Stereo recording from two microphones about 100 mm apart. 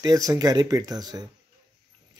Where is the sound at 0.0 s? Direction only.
35° right (ahead or behind).